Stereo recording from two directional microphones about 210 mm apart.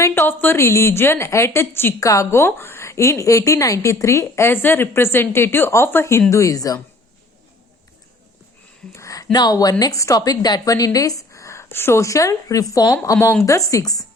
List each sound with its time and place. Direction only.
0.0 s a woman's voice: 10° left (ahead or behind)
8.9 s a woman's voice: 15° left (ahead or behind)